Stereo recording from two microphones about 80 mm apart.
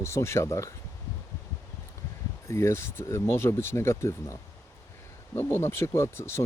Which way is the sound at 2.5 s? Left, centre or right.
Left.